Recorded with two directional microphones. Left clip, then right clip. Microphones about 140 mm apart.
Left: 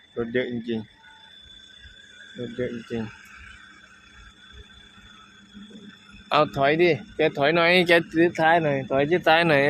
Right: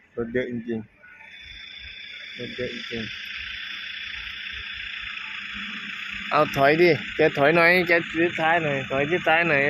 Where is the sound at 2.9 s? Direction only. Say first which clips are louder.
Even; 75° left (ahead or behind).